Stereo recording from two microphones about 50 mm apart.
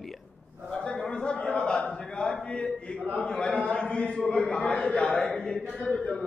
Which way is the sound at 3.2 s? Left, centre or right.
Centre.